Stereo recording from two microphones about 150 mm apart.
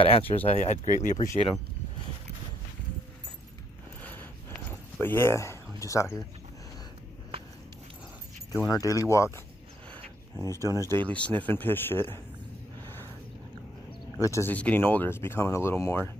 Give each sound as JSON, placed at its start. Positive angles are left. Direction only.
{"t": 0.0, "sound": "speech", "side_deg": 40}
{"t": 4.0, "sound": "a sound", "side_deg": 15}
{"t": 5.0, "sound": "speech", "side_deg": 15}
{"t": 8.6, "sound": "speech", "side_deg": 20}
{"t": 10.4, "sound": "speech", "side_deg": -20}
{"t": 11.0, "sound": "speech", "side_deg": 10}
{"t": 14.1, "sound": "speech", "side_deg": 20}